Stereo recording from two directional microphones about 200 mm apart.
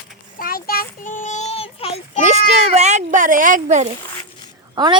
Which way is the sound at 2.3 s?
35° right (ahead or behind).